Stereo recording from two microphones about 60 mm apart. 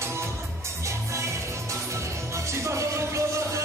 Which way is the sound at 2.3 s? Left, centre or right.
Right.